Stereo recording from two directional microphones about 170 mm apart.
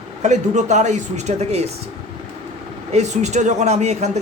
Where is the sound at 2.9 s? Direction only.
40° right (ahead or behind).